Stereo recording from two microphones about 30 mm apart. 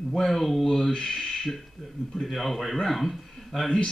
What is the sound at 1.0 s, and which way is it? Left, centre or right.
Speech, centre.